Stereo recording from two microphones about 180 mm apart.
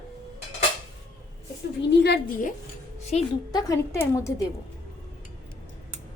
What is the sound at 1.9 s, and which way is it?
Speech, 65° left (ahead or behind).